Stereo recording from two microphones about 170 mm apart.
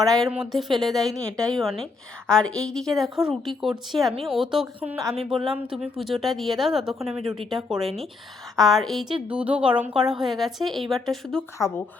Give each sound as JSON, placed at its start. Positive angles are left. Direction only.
{"t": 0.1, "sound": "a woman's voice", "side_deg": 0}
{"t": 7.0, "sound": "speech", "side_deg": -35}
{"t": 7.5, "sound": "a woman's voice", "side_deg": 0}